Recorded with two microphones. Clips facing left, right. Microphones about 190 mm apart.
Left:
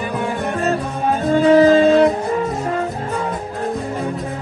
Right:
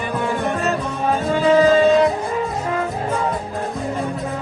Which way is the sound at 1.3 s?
40° left (ahead or behind).